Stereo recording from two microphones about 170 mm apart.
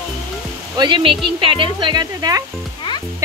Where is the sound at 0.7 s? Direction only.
25° right (ahead or behind).